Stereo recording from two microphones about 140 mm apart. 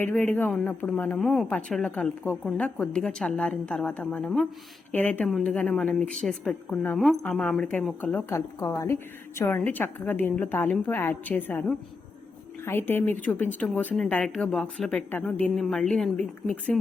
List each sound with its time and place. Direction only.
0.0 s a woman's voice: 10° left (ahead or behind)